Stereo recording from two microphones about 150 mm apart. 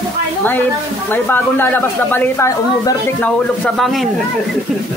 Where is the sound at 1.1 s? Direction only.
15° left (ahead or behind).